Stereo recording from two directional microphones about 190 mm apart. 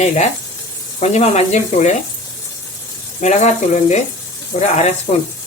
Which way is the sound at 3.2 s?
35° left (ahead or behind).